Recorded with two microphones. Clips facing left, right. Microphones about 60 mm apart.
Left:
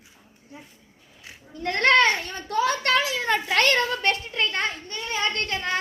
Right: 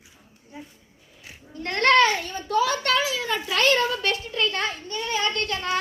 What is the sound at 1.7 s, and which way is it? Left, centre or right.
Children playing, left.